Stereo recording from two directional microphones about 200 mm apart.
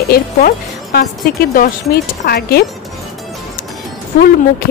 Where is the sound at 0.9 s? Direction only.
50° left (ahead or behind).